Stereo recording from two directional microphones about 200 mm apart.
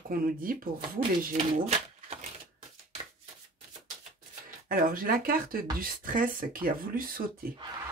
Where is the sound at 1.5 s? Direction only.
30° right (ahead or behind).